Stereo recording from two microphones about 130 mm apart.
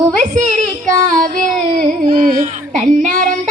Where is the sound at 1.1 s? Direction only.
90° right.